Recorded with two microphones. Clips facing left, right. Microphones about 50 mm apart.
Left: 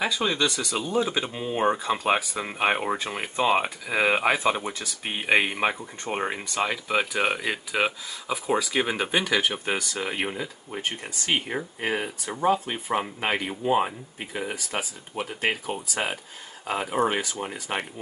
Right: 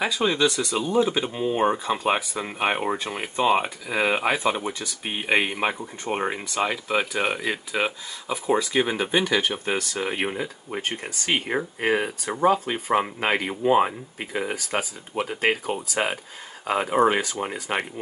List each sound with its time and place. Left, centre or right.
0.0 s speech: centre
10.0 s speech: centre